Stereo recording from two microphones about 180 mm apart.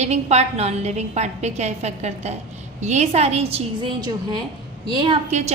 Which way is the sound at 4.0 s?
25° right (ahead or behind).